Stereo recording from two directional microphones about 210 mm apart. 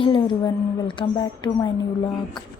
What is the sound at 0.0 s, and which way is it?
A woman's voice, 20° left (ahead or behind).